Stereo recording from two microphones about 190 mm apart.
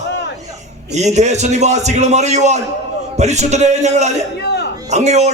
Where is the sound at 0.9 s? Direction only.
35° right (ahead or behind).